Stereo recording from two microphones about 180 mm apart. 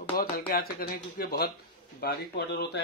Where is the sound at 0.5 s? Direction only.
55° left (ahead or behind).